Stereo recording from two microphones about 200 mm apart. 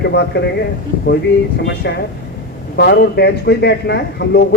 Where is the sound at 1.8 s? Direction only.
55° left (ahead or behind).